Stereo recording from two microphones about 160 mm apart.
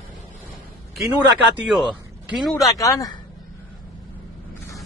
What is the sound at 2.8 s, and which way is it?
Speech, 20° left (ahead or behind).